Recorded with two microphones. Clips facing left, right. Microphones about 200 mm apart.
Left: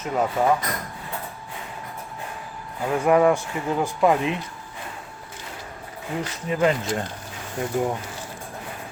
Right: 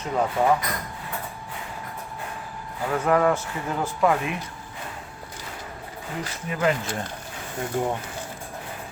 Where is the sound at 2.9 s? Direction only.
15° left (ahead or behind).